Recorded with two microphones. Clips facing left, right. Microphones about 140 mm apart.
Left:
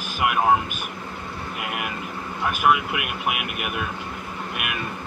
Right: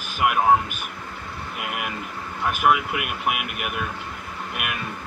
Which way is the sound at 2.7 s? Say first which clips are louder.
Even; centre (ahead or behind).